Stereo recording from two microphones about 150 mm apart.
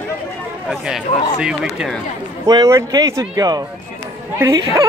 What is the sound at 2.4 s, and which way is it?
Speech, 20° right (ahead or behind).